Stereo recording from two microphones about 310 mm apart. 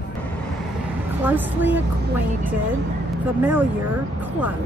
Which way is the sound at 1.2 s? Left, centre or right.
Centre.